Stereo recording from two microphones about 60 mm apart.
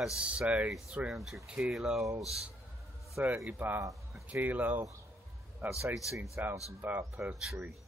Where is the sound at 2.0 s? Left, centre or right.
Right.